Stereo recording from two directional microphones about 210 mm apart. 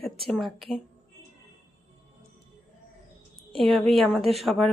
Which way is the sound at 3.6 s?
Centre (ahead or behind).